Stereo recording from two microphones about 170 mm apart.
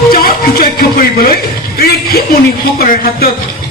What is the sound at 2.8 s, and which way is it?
Speech, 60° left (ahead or behind).